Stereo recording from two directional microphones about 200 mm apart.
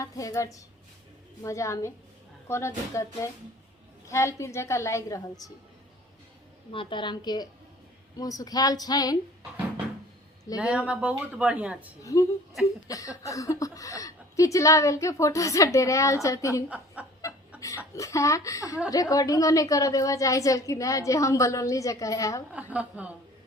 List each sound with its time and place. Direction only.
0.0 s a woman's voice: 15° left (ahead or behind)
6.7 s speech: 25° left (ahead or behind)
10.6 s a woman's voice: 5° right (ahead or behind)
12.0 s a woman's voice: 15° left (ahead or behind)
16.6 s speech: 5° right (ahead or behind)
17.6 s a woman's voice: 15° left (ahead or behind)
22.5 s a woman's voice: 5° right (ahead or behind)